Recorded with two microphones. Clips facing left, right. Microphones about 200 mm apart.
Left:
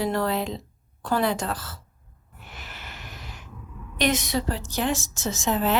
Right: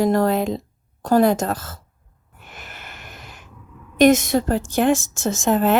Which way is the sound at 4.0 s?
50° right (ahead or behind).